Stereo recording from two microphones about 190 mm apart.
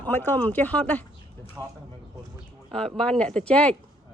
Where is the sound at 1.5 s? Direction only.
15° right (ahead or behind).